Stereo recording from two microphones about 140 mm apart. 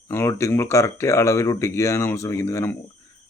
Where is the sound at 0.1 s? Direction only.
20° left (ahead or behind).